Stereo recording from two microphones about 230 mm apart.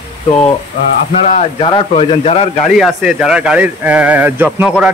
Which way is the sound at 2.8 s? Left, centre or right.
Centre.